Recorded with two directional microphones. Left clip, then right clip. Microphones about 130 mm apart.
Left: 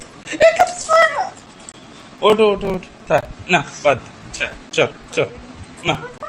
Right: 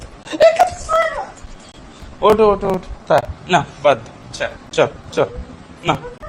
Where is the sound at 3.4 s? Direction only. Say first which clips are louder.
Right 1 dB; 25° right (ahead or behind).